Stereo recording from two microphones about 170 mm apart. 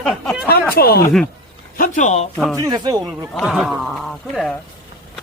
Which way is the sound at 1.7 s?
50° left (ahead or behind).